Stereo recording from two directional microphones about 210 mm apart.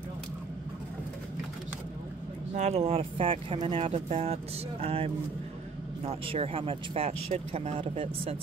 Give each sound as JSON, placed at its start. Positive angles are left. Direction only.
{"t": 2.5, "sound": "speech", "side_deg": -30}